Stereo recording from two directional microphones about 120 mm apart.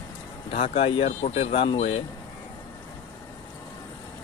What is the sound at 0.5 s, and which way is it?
Speech, 55° left (ahead or behind).